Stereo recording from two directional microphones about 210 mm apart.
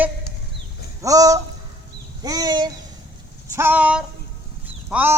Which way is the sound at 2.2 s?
20° right (ahead or behind).